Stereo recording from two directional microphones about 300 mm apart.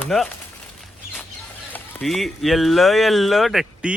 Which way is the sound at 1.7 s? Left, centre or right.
Centre.